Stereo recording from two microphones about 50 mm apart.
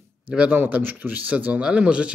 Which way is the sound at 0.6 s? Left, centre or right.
Right.